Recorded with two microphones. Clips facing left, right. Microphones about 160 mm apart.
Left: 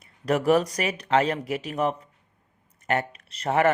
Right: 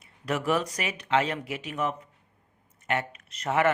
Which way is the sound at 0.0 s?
40° left (ahead or behind).